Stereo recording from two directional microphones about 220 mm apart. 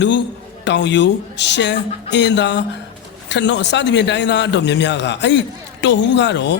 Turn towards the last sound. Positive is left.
turn(degrees=55)  # may be behind; listen again after turning